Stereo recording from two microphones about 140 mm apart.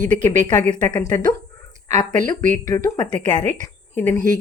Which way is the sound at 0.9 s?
30° left (ahead or behind).